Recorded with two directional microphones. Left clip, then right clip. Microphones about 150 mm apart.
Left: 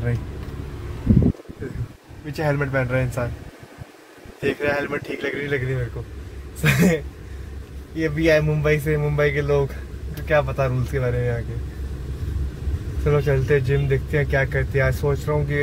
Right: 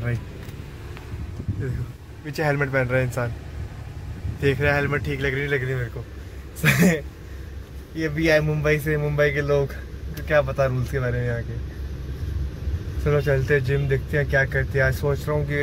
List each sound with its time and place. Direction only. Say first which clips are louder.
2.2 s speech: even; 15° right (ahead or behind)
4.4 s speech: right 1 dB; 25° right (ahead or behind)
6.6 s speech: even; centre (ahead or behind)
8.0 s speech: left 2 dB; centre (ahead or behind)
13.0 s speech: left 1 dB; centre (ahead or behind)